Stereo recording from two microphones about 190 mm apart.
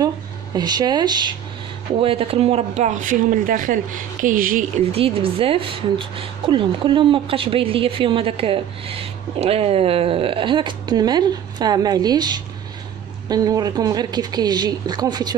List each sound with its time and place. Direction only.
0.6 s a woman's voice: 20° right (ahead or behind); by 4.6 s 45° right (ahead or behind)
4.9 s a woman's voice: 30° right (ahead or behind)